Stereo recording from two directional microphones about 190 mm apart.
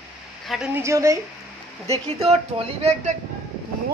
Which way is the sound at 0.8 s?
15° right (ahead or behind).